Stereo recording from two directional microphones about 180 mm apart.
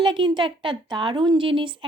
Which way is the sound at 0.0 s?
25° right (ahead or behind).